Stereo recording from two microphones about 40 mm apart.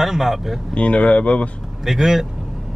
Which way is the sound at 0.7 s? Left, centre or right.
Left.